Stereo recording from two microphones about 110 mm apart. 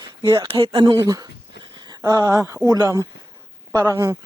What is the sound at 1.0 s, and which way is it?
Speech, 30° right (ahead or behind).